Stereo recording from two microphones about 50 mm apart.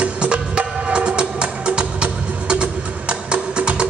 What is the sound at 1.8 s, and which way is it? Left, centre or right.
Music, centre.